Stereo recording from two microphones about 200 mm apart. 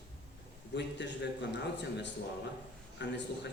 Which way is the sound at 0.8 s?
60° left (ahead or behind).